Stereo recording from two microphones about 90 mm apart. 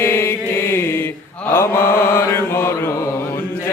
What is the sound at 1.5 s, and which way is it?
Mantra, 25° left (ahead or behind).